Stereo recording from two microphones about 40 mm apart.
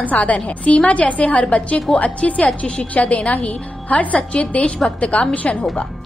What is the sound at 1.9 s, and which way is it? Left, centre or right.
Speech, centre.